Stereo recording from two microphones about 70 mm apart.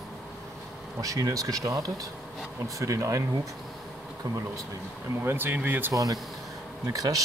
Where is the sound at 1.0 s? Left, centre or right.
Right.